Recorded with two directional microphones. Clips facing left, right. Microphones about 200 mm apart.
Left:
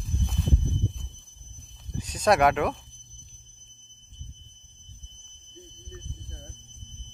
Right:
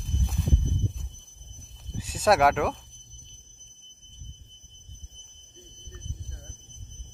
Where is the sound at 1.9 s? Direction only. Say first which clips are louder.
Even; 5° right (ahead or behind).